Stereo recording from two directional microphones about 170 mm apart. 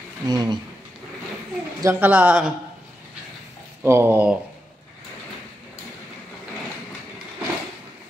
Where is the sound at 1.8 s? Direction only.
10° right (ahead or behind).